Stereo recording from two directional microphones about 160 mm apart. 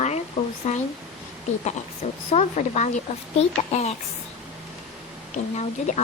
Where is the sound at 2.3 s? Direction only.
45° left (ahead or behind).